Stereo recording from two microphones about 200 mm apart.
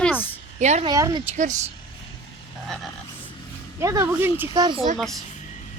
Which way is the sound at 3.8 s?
15° right (ahead or behind).